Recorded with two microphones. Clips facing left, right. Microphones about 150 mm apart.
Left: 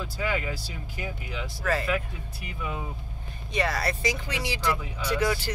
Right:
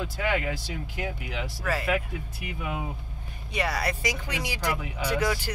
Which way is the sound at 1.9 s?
70° right (ahead or behind).